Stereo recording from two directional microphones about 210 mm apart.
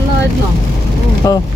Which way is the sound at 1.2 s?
15° left (ahead or behind).